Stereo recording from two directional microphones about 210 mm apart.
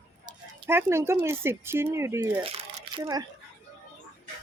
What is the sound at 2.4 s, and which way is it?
Crumpling, 25° right (ahead or behind).